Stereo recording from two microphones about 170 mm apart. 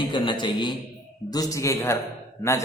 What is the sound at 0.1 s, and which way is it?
A man's voice, 30° left (ahead or behind).